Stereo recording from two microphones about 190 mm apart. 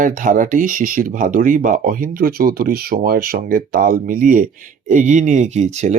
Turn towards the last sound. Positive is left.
turn(degrees=-35)  # may be behind; listen again after turning